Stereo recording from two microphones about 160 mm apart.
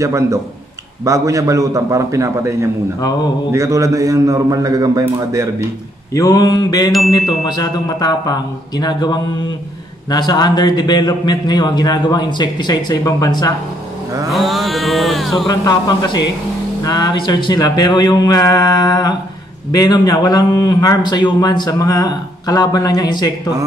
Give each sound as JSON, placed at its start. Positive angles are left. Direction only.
{"t": 0.0, "sound": "a man's voice", "side_deg": -20}
{"t": 6.1, "sound": "a man's voice", "side_deg": 20}
{"t": 14.3, "sound": "mantra", "side_deg": 0}
{"t": 15.4, "sound": "a man's voice", "side_deg": 25}